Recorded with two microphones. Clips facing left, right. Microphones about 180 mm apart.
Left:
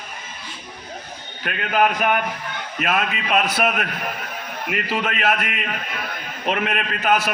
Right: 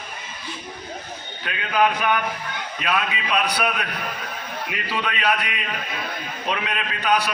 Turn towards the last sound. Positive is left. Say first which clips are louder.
# left 2 dB
turn(degrees=45)  # may be behind; listen again after turning